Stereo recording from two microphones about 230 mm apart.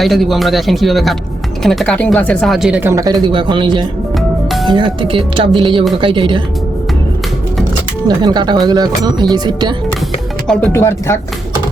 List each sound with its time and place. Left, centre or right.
0.0 s speech: centre; by 6.4 s right
8.0 s speech: centre
10.4 s speech: centre